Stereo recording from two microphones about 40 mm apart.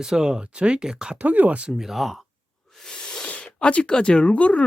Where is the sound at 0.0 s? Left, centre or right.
Centre.